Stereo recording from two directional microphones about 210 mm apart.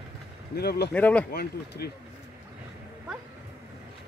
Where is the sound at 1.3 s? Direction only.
50° left (ahead or behind).